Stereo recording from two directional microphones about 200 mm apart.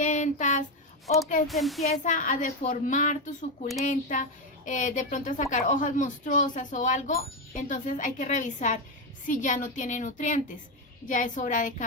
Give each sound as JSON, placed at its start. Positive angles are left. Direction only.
{"t": 0.0, "sound": "a sound", "side_deg": 35}
{"t": 1.0, "sound": "speech", "side_deg": 0}
{"t": 1.9, "sound": "a woman's voice", "side_deg": 40}